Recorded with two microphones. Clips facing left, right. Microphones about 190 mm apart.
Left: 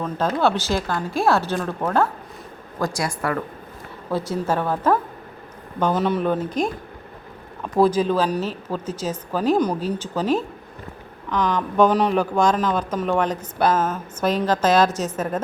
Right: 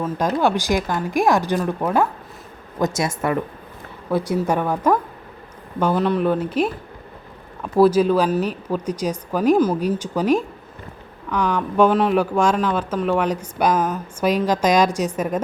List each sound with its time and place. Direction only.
0.0 s speech: 10° right (ahead or behind)
5.8 s speech: centre (ahead or behind)